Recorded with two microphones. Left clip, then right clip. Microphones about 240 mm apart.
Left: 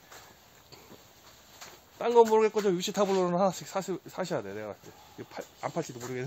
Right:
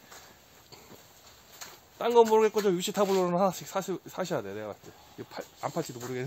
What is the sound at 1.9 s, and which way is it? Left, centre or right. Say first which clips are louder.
A man's voice: even; centre.